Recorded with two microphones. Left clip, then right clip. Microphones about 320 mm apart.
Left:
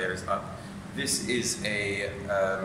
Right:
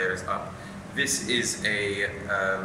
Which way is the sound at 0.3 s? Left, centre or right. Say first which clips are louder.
Even; centre.